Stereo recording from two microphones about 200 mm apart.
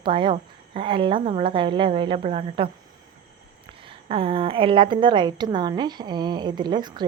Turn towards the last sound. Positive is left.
turn(degrees=-20)  # may be behind; listen again after turning